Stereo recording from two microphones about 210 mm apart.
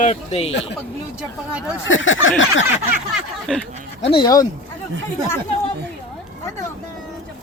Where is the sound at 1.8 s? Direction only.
65° left (ahead or behind).